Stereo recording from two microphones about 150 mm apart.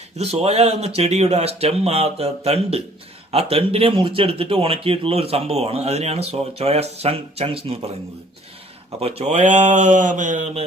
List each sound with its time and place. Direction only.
0.2 s a man's voice: 45° right (ahead or behind)
9.0 s speech: 45° right (ahead or behind)